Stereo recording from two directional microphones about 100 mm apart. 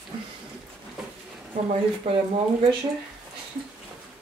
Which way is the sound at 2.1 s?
85° right.